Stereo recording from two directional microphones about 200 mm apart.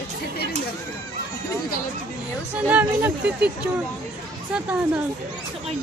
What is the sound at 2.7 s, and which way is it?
Speech, 5° right (ahead or behind).